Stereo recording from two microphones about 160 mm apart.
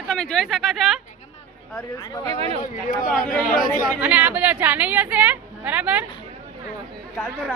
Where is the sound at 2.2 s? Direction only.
40° right (ahead or behind).